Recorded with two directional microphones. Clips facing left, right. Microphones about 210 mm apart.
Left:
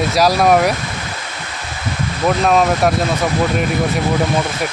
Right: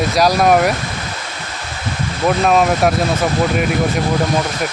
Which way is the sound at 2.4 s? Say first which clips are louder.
Even; centre (ahead or behind).